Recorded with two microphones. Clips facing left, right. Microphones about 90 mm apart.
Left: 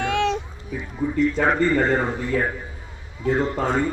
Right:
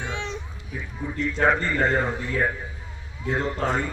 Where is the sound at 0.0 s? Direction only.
75° left (ahead or behind).